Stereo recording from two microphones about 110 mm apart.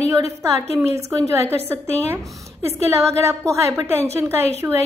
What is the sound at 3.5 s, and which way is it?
A woman's voice, 25° right (ahead or behind).